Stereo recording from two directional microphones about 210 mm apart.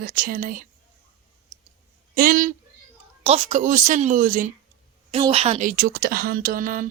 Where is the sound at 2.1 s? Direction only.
40° right (ahead or behind).